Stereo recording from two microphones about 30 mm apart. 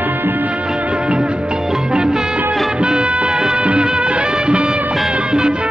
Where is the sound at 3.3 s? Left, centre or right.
Right.